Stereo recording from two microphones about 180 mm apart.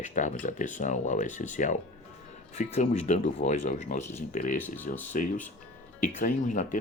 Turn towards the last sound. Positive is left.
turn(degrees=45)  # may be behind; listen again after turning